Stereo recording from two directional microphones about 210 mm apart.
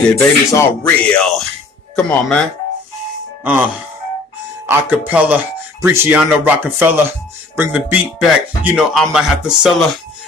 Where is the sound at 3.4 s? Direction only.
10° right (ahead or behind).